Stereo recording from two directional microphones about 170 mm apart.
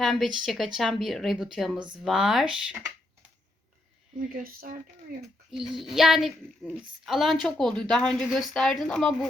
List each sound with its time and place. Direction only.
0.0 s speech: centre (ahead or behind)
4.2 s speech: 55° right (ahead or behind)
5.5 s speech: centre (ahead or behind)